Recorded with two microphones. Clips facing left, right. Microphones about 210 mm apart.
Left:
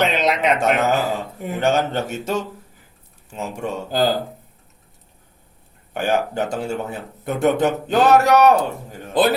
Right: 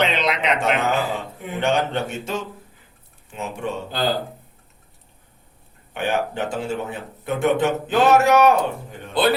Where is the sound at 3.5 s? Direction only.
45° left (ahead or behind).